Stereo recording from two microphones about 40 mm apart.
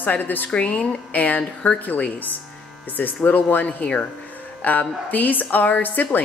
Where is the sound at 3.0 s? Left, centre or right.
Left.